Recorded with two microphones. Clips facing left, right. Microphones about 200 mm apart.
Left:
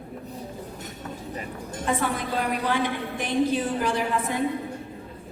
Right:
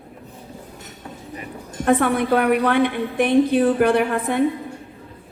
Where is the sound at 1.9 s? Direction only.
60° right (ahead or behind).